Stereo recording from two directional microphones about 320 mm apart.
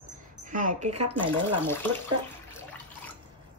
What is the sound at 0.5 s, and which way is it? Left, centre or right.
Speech, right.